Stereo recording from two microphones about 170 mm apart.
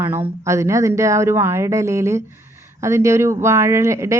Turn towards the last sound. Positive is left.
turn(degrees=-15)  # may be behind; listen again after turning